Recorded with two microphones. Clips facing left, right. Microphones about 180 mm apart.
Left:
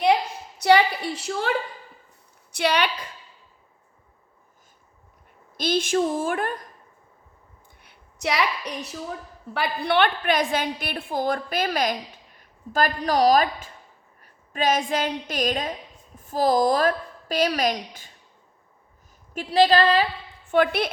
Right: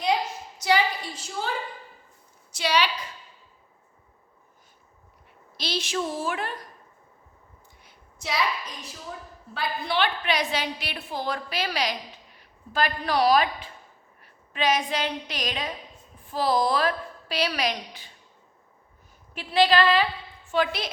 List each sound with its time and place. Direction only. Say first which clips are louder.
0.6 s a sound: left 6 dB; 65° left (ahead or behind)
2.5 s a woman's voice: left 2 dB; 60° left (ahead or behind)
5.5 s a woman's voice: left 7 dB; 50° left (ahead or behind)
7.8 s a sound: left 10 dB; 65° left (ahead or behind)
9.5 s a woman's voice: left 5 dB; 65° left (ahead or behind); by 18.1 s 45° left (ahead or behind)
19.3 s a woman's voice: left 3 dB; 40° left (ahead or behind)
20.5 s a woman's voice: left 5 dB; 55° left (ahead or behind)